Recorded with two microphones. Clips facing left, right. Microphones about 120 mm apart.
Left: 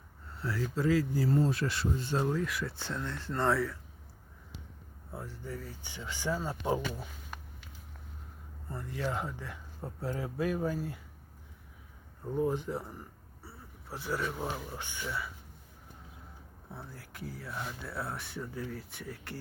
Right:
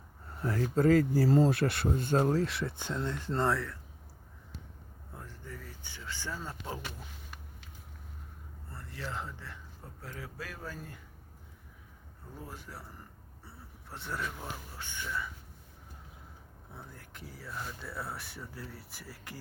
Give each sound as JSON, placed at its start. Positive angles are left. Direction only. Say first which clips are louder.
{"t": 0.3, "sound": "speech", "louder": "right 4 dB", "side_deg": -45}
{"t": 3.4, "sound": "speech", "louder": "left 3 dB", "side_deg": 0}
{"t": 5.1, "sound": "speech", "louder": "left 6 dB", "side_deg": 10}
{"t": 8.7, "sound": "speech", "louder": "left 6 dB", "side_deg": 15}
{"t": 9.8, "sound": "speech", "louder": "left 9 dB", "side_deg": 25}
{"t": 12.4, "sound": "speech", "louder": "left 15 dB", "side_deg": 20}
{"t": 13.9, "sound": "speech", "louder": "left 4 dB", "side_deg": 0}
{"t": 14.4, "sound": "speech", "louder": "left 6 dB", "side_deg": 15}
{"t": 16.7, "sound": "speech", "louder": "left 3 dB", "side_deg": 5}